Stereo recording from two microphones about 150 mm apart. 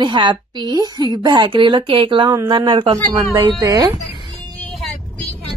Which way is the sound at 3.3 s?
25° right (ahead or behind).